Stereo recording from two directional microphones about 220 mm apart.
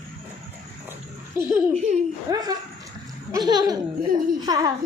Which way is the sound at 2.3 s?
15° right (ahead or behind).